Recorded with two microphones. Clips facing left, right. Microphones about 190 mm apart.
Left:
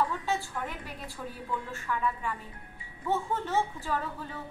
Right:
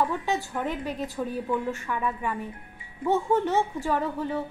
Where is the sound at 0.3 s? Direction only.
20° right (ahead or behind).